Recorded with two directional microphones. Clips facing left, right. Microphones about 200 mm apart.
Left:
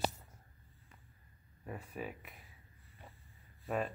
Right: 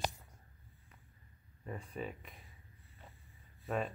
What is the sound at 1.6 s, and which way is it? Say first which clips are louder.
Speech: right 1 dB; 5° left (ahead or behind).